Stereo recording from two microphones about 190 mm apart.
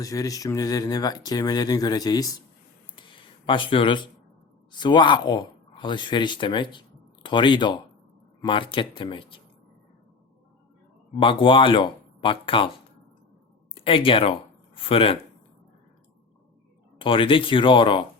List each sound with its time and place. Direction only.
0.0 s speech: 20° left (ahead or behind)
2.9 s a sound: 25° left (ahead or behind)
4.7 s speech: 25° left (ahead or behind)
11.2 s speech: 25° left (ahead or behind)
13.7 s speech: 30° left (ahead or behind)
17.0 s speech: 25° left (ahead or behind)